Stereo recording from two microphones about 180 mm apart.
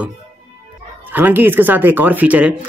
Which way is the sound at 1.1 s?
10° right (ahead or behind).